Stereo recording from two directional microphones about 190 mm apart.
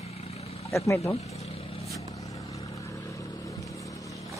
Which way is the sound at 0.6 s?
15° left (ahead or behind).